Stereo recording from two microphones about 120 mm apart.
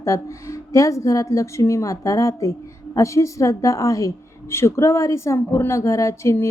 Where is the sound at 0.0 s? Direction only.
25° left (ahead or behind).